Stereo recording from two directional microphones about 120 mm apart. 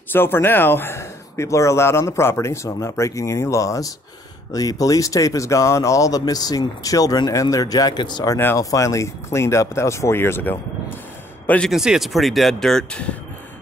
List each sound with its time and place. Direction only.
0.1 s speech: 20° left (ahead or behind); by 8.4 s 35° left (ahead or behind)
8.4 s speech: 25° left (ahead or behind)
11.7 s speech: 5° right (ahead or behind)